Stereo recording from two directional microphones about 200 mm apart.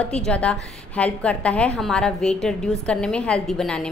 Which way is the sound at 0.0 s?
5° left (ahead or behind).